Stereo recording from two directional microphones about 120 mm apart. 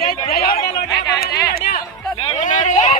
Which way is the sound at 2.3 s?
90° left.